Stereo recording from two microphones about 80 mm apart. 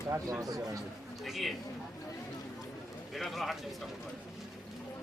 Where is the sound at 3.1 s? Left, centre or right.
Centre.